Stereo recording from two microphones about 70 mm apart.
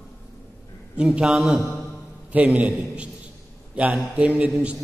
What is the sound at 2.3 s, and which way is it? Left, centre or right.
Speech, centre.